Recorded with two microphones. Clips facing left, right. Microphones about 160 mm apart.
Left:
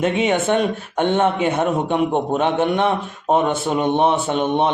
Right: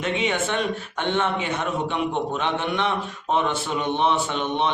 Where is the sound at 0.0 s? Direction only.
50° left (ahead or behind).